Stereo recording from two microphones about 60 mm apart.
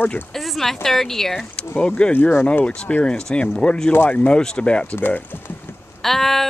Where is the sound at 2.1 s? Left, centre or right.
Left.